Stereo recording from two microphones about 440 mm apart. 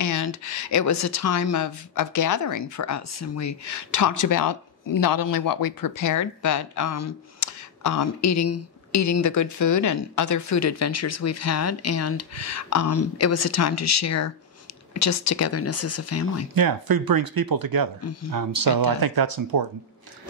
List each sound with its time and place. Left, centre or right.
0.0 s speech: left
16.5 s speech: right